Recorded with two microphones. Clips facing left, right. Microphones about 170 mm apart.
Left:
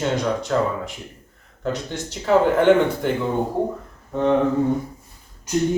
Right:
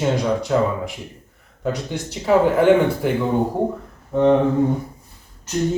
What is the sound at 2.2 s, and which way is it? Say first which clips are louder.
Speech: right 1 dB; 5° right (ahead or behind).